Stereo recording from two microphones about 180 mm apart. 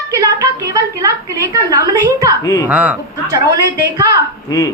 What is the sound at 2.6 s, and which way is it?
Speech, 5° right (ahead or behind).